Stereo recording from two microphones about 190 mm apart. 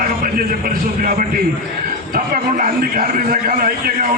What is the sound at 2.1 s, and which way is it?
A man's voice, 50° right (ahead or behind).